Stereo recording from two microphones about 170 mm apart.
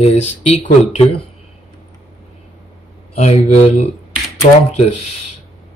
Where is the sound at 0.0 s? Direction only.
35° left (ahead or behind).